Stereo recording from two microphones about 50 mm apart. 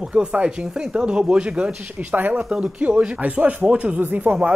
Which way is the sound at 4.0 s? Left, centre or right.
Right.